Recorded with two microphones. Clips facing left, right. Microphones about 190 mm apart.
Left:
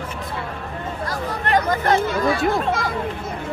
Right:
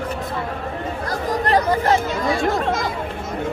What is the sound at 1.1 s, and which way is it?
Chatter, 35° right (ahead or behind).